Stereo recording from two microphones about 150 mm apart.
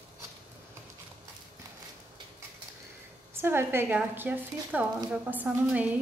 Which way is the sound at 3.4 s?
15° right (ahead or behind).